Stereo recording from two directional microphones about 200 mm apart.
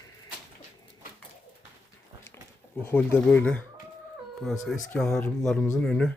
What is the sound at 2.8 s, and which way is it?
Speech, 10° left (ahead or behind).